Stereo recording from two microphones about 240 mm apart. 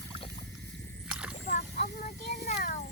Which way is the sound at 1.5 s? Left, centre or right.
Left.